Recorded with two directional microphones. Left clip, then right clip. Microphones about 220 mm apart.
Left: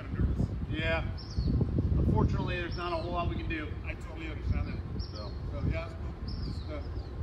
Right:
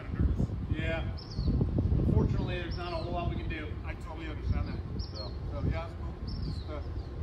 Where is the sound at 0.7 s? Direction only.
15° left (ahead or behind).